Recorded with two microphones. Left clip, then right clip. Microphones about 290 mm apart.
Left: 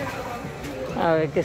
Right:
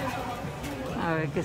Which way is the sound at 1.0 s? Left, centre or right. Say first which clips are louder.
Left 9 dB; centre.